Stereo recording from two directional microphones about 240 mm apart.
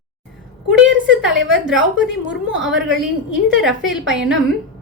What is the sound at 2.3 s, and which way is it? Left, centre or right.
A woman's voice, centre.